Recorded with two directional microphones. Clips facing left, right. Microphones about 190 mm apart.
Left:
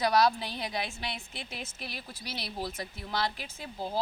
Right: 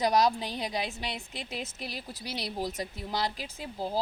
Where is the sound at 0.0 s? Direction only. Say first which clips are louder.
Even; 20° right (ahead or behind).